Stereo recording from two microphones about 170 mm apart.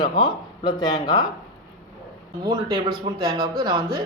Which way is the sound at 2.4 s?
25° right (ahead or behind).